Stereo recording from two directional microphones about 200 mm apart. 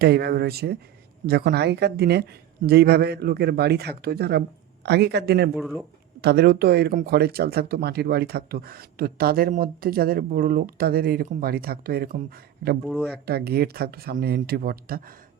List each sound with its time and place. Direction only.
0.0 s speech: 55° right (ahead or behind)
5.5 s speech: 5° right (ahead or behind)
6.2 s speech: 55° right (ahead or behind)
12.8 s speech: 5° left (ahead or behind)
13.2 s speech: 50° right (ahead or behind)